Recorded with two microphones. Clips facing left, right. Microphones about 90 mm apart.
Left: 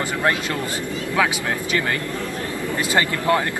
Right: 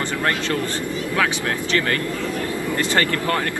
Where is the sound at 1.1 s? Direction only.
15° left (ahead or behind).